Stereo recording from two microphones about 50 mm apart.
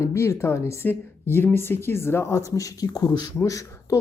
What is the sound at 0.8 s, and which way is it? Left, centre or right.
Speech, left.